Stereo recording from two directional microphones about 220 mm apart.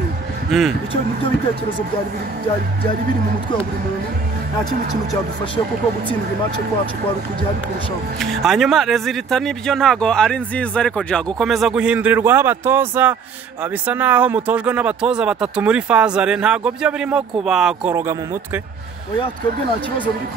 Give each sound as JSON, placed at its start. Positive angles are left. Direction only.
{"t": 0.5, "sound": "speech", "side_deg": 0}
{"t": 8.2, "sound": "speech", "side_deg": 0}